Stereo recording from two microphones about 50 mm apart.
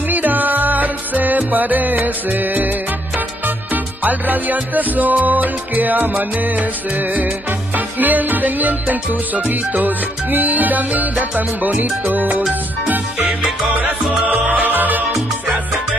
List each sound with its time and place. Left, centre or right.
0.1 s music: right
13.2 s music: right
14.2 s music: right